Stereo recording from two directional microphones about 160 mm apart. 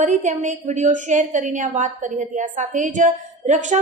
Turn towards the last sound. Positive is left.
turn(degrees=-50)  # may be behind; listen again after turning